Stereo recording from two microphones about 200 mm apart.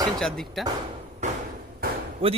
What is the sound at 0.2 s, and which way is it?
Speech, centre (ahead or behind).